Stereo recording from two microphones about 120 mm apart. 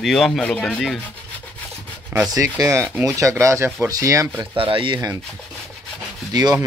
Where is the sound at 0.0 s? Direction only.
Centre (ahead or behind).